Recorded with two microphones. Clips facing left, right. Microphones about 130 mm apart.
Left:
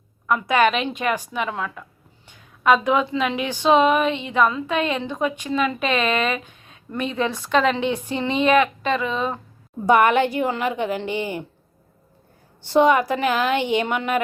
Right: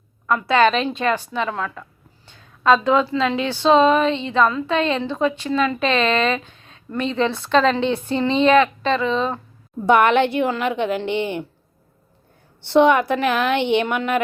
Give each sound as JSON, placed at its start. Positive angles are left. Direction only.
{"t": 0.3, "sound": "speech", "side_deg": 15}
{"t": 9.8, "sound": "a woman's voice", "side_deg": -65}
{"t": 12.6, "sound": "a woman's voice", "side_deg": -65}